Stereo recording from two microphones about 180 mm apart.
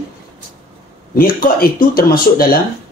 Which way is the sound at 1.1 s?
55° left (ahead or behind).